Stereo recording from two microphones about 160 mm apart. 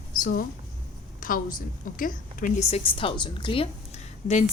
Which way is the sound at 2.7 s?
35° left (ahead or behind).